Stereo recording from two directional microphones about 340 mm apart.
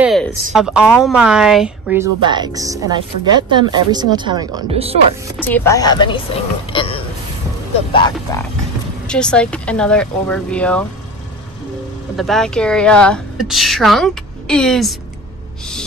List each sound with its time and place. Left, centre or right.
0.0 s a woman's voice: centre
5.4 s speech: centre
6.7 s burping: centre
7.9 s a woman's voice: centre
12.2 s a woman's voice: centre